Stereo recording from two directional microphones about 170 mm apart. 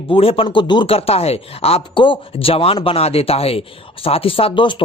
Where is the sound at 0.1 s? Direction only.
35° left (ahead or behind).